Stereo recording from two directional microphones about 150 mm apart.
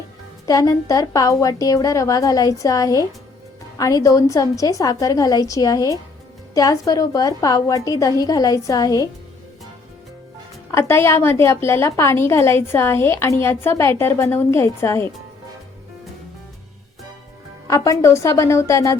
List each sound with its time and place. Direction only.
0.4 s a woman's voice: 25° left (ahead or behind)
10.7 s a woman's voice: 20° left (ahead or behind)
17.7 s a woman's voice: 20° left (ahead or behind)